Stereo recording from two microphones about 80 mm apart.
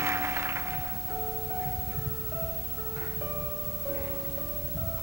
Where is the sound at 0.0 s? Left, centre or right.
Right.